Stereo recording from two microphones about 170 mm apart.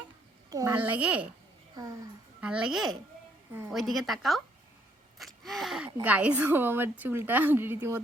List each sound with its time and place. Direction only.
0.5 s speech: 15° right (ahead or behind)
1.7 s speech: 20° right (ahead or behind)
2.4 s a woman's voice: 5° right (ahead or behind)